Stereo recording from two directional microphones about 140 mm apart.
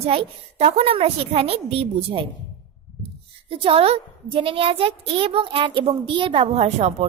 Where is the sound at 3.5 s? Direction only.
40° right (ahead or behind).